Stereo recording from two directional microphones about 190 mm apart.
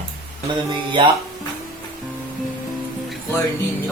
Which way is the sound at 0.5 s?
25° right (ahead or behind).